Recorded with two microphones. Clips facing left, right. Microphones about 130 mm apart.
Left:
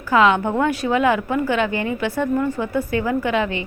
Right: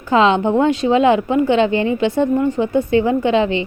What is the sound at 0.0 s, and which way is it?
A woman's voice, 25° right (ahead or behind).